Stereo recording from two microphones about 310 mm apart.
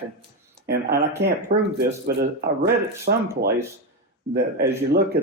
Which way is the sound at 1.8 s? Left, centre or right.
Right.